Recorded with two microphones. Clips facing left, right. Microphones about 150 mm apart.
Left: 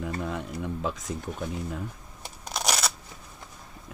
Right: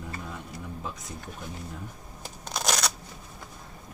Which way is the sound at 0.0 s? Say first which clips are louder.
Left 7 dB; 90° left.